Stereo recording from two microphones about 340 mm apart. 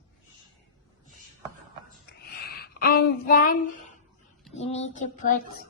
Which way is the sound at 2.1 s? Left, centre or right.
Left.